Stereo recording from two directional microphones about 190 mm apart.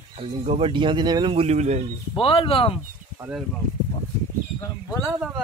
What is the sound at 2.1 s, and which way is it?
Speech, 25° left (ahead or behind).